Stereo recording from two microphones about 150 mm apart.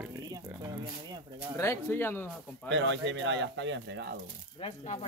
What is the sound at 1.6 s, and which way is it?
Speech, 15° left (ahead or behind).